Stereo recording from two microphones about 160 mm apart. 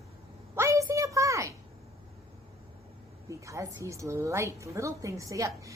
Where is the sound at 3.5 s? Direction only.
20° right (ahead or behind).